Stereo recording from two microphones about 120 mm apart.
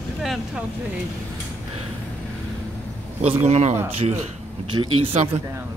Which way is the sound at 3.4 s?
65° right (ahead or behind).